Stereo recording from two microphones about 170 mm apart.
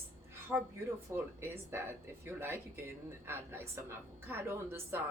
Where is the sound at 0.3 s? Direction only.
15° right (ahead or behind).